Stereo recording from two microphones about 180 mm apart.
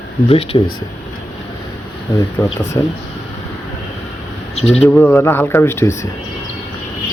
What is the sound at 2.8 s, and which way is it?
Speech, 20° left (ahead or behind).